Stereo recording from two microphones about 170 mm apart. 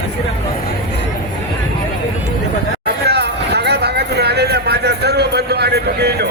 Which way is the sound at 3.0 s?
75° right (ahead or behind).